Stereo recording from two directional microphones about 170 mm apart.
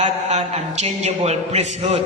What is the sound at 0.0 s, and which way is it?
A man's voice, 40° right (ahead or behind).